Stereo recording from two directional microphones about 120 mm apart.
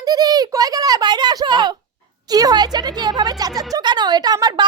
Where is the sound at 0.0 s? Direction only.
30° right (ahead or behind).